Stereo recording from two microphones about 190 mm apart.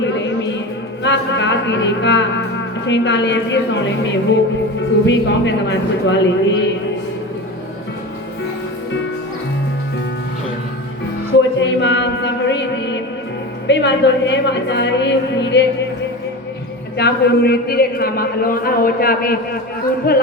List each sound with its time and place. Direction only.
0.0 s a sound: 70° left (ahead or behind)
1.0 s a woman's voice: 70° left (ahead or behind)
11.6 s music: 65° left (ahead or behind)
13.7 s a woman's voice: 65° left (ahead or behind)
17.0 s a man's voice: 55° left (ahead or behind)